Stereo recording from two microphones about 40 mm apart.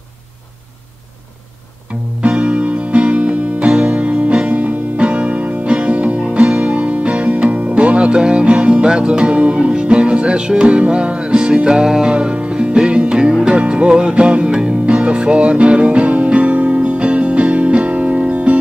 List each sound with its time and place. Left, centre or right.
2.2 s music: right
13.3 s music: centre
13.6 s music: right